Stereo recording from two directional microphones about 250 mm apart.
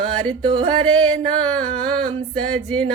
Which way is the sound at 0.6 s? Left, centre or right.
Right.